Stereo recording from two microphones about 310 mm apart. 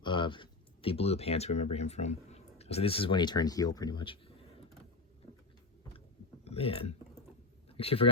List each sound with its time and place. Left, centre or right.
0.0 s speech: centre
6.4 s a man's voice: centre